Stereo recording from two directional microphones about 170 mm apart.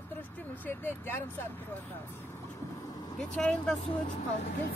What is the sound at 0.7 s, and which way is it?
A woman's voice, 10° left (ahead or behind).